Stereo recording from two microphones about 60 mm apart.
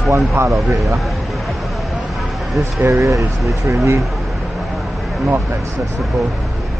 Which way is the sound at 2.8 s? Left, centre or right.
Right.